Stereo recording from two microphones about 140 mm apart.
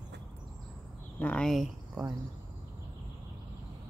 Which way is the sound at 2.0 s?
10° right (ahead or behind).